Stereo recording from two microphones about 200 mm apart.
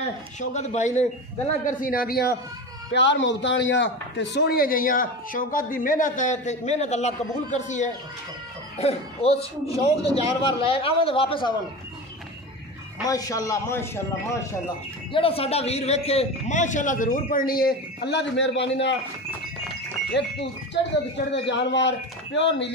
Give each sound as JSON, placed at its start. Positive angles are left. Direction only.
{"t": 0.4, "sound": "a man's voice", "side_deg": 35}
{"t": 2.9, "sound": "a man's voice", "side_deg": 60}
{"t": 13.0, "sound": "a man's voice", "side_deg": 20}
{"t": 15.1, "sound": "a man's voice", "side_deg": 30}
{"t": 20.2, "sound": "a man's voice", "side_deg": 60}